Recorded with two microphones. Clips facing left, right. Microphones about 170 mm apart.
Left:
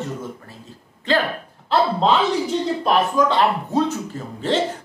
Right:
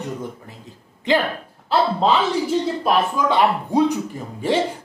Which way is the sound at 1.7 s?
5° right (ahead or behind).